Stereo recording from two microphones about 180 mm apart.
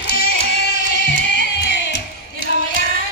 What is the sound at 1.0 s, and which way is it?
Music, 75° left (ahead or behind).